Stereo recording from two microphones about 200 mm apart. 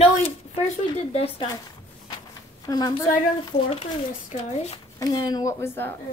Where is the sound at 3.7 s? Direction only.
30° left (ahead or behind).